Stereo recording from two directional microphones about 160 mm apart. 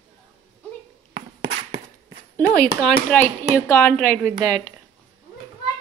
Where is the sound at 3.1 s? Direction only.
10° left (ahead or behind).